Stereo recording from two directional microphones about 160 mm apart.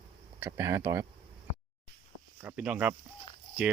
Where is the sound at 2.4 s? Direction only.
10° right (ahead or behind).